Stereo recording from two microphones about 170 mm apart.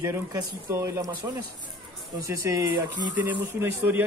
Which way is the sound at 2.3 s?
20° right (ahead or behind).